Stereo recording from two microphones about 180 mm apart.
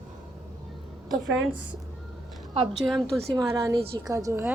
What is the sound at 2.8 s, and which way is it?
Speech, centre (ahead or behind).